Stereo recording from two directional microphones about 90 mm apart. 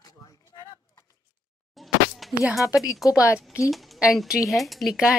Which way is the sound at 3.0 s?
35° left (ahead or behind).